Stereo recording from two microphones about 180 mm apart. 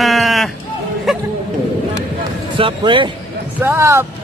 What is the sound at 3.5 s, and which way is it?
Speech, 15° right (ahead or behind).